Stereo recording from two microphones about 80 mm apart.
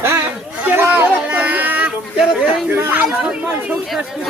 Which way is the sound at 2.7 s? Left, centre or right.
Right.